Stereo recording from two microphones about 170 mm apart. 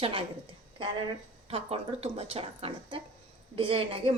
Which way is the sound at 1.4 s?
35° right (ahead or behind).